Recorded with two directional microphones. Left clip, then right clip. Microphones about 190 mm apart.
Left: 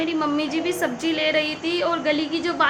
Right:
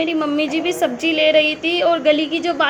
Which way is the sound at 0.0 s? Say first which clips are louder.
Right 4 dB; 15° right (ahead or behind).